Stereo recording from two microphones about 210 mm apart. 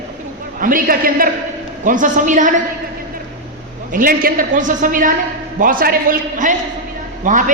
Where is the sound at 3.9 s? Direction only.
40° right (ahead or behind).